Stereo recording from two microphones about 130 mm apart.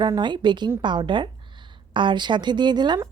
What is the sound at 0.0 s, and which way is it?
A woman's voice, 35° right (ahead or behind).